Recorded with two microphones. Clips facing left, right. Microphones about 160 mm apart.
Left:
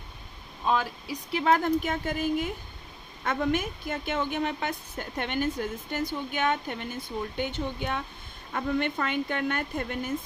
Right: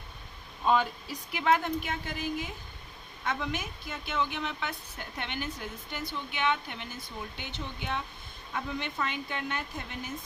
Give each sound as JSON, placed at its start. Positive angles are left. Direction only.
{"t": 0.6, "sound": "speech", "side_deg": 0}
{"t": 1.3, "sound": "a woman's voice", "side_deg": 35}